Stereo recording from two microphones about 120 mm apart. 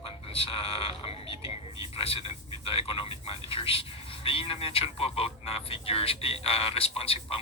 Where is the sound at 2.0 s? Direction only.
50° left (ahead or behind).